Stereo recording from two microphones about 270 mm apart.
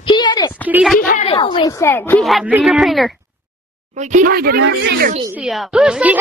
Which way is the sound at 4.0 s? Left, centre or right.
Right.